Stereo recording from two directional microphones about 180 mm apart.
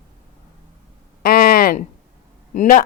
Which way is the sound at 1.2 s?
55° left (ahead or behind).